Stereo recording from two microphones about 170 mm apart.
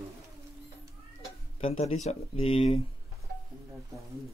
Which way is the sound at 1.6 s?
35° left (ahead or behind).